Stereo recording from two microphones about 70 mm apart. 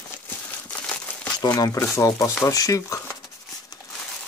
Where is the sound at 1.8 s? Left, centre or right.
Left.